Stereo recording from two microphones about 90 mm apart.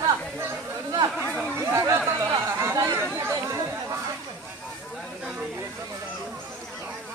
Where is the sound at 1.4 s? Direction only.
30° right (ahead or behind).